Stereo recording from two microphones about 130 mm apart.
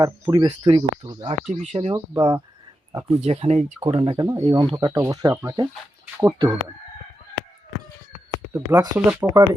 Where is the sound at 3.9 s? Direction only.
45° right (ahead or behind).